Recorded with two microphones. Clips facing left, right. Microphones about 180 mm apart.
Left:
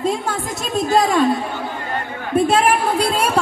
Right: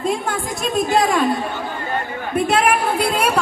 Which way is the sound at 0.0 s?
20° left (ahead or behind).